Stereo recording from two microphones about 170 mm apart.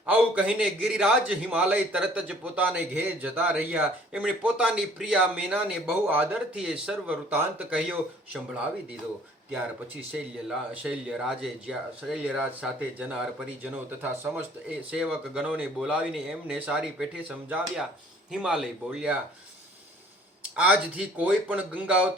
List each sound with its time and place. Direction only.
0.0 s a man's voice: 5° right (ahead or behind)
10.8 s a man's voice: 5° right (ahead or behind)
20.6 s a man's voice: 10° right (ahead or behind)